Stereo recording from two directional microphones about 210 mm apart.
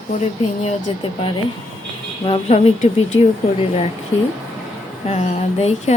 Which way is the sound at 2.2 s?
30° left (ahead or behind).